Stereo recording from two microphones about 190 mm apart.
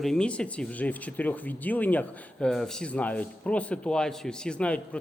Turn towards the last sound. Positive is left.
turn(degrees=5)  # may be behind; listen again after turning